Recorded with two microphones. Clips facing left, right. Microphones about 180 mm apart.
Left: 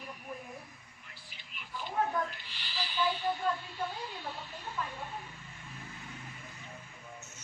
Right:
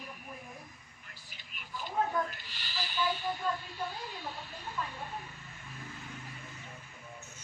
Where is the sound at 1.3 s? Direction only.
45° right (ahead or behind).